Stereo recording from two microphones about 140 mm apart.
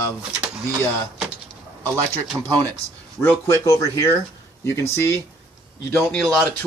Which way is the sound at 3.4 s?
25° left (ahead or behind).